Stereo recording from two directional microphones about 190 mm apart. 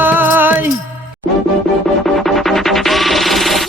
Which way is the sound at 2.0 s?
Centre (ahead or behind).